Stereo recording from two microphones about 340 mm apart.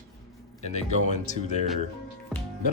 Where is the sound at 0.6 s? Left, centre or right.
Centre.